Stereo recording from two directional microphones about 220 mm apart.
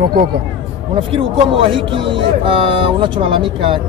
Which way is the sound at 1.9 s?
25° right (ahead or behind).